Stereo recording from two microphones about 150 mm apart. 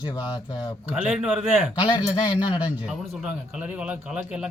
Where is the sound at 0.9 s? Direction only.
5° right (ahead or behind).